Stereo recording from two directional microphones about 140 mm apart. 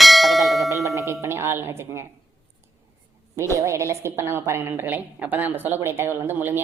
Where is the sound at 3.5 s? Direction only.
20° right (ahead or behind).